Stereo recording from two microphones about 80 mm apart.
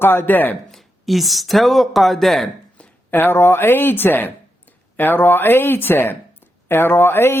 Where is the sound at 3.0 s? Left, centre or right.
Left.